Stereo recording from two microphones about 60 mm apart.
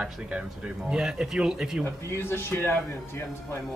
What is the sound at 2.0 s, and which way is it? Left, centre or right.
Speech, left.